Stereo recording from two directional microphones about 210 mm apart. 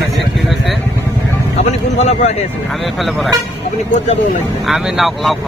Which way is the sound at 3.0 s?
Centre (ahead or behind).